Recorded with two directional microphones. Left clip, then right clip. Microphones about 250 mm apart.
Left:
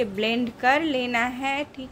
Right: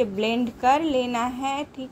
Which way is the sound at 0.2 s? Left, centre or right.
Centre.